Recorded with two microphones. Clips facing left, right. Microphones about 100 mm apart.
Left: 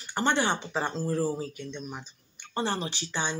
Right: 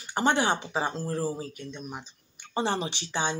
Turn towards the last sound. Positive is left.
turn(degrees=-15)  # may be behind; listen again after turning